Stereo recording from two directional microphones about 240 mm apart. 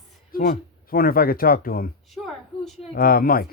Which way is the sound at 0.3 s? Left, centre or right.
Left.